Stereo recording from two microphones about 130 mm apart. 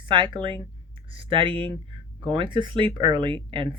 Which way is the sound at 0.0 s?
40° right (ahead or behind).